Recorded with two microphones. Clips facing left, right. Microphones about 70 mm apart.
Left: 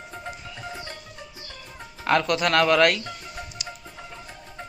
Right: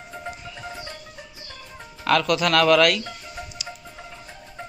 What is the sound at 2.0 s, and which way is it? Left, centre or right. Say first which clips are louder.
Speech: right 1 dB; left.